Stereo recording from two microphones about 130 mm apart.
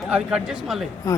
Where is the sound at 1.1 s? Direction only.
25° left (ahead or behind).